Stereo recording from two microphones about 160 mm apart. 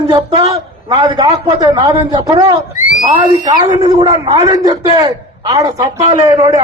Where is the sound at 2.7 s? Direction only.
55° left (ahead or behind).